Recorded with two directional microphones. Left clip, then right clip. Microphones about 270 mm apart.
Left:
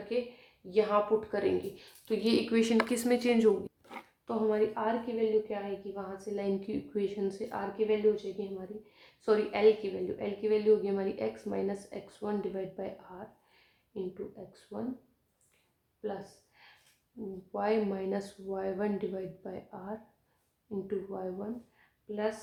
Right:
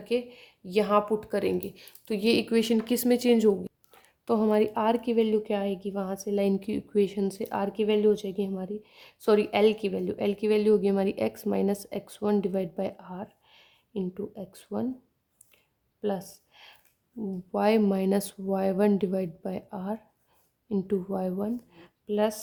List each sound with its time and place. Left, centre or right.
0.1 s a woman's voice: right
16.5 s a sound: right
17.5 s a woman's voice: right